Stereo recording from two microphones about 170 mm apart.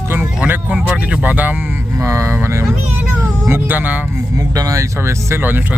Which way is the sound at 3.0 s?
10° right (ahead or behind).